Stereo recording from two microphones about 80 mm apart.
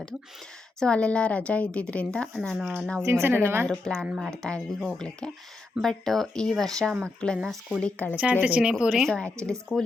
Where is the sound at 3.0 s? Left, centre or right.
Right.